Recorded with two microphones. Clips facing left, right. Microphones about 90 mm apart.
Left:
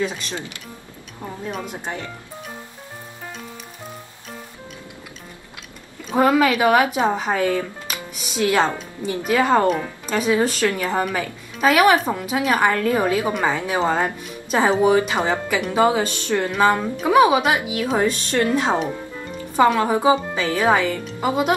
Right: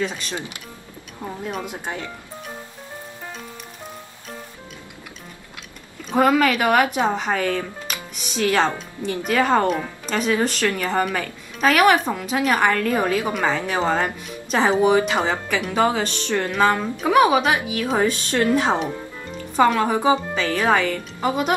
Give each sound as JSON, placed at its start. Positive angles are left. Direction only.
{"t": 0.0, "sound": "a woman's voice", "side_deg": 0}
{"t": 0.3, "sound": "speech", "side_deg": -20}
{"t": 1.2, "sound": "a woman's voice", "side_deg": -5}
{"t": 6.0, "sound": "a woman's voice", "side_deg": 5}